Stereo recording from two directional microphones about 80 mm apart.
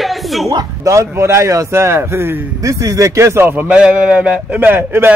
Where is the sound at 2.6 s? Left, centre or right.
Right.